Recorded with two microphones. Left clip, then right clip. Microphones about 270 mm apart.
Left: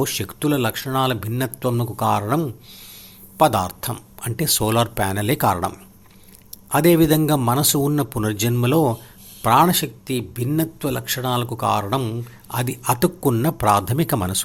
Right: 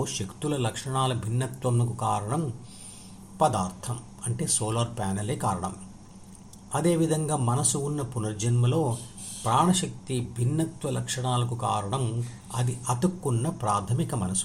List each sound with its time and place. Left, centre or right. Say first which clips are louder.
0.0 s speech: left 9 dB; left